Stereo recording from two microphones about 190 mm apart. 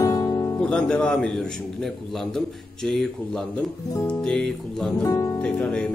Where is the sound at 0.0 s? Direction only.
20° left (ahead or behind).